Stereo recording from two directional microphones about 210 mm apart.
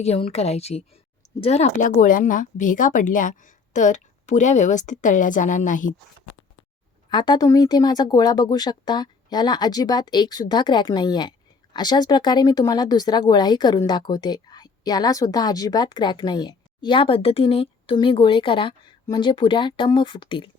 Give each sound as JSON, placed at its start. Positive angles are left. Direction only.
{"t": 0.0, "sound": "speech", "side_deg": 30}
{"t": 7.1, "sound": "speech", "side_deg": 20}